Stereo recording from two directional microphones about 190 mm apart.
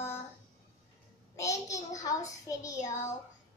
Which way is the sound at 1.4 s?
15° left (ahead or behind).